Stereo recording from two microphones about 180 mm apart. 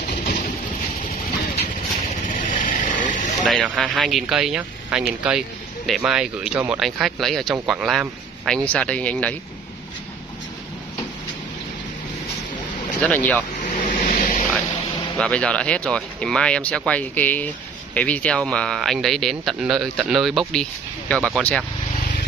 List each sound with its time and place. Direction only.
2.2 s vehicle: 50° left (ahead or behind)
3.4 s speech: centre (ahead or behind)
13.0 s speech: 10° left (ahead or behind)
13.6 s a sound: 45° left (ahead or behind)
15.1 s speech: 5° left (ahead or behind)